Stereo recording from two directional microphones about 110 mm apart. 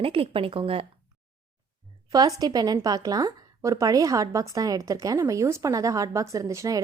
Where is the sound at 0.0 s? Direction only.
55° right (ahead or behind).